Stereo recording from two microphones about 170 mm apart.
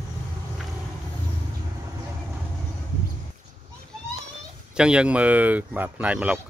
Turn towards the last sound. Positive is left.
turn(degrees=-5)  # may be behind; listen again after turning